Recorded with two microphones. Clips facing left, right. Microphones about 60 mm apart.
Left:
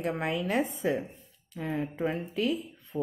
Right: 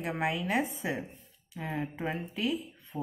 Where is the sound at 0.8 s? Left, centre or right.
Centre.